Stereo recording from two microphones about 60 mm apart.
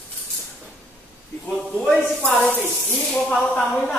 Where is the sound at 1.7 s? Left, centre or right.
Centre.